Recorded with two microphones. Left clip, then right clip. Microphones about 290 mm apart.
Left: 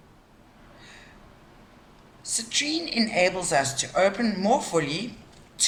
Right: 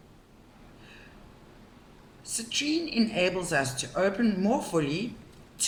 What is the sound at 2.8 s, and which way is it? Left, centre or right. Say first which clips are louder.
A woman's voice: left 4 dB; left.